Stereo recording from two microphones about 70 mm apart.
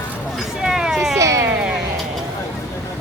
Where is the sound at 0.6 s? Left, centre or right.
Centre.